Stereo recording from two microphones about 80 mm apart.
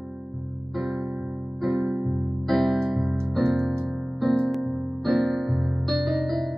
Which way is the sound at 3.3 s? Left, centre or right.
Centre.